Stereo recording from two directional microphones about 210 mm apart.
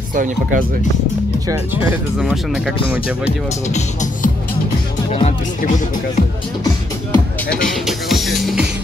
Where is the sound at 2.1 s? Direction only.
Centre (ahead or behind).